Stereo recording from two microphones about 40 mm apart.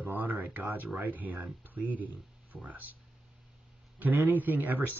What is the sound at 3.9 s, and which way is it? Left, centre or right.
Speech, right.